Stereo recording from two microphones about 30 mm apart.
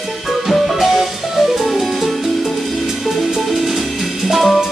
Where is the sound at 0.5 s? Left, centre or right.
Centre.